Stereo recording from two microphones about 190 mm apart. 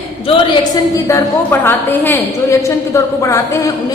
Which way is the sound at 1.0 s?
15° left (ahead or behind).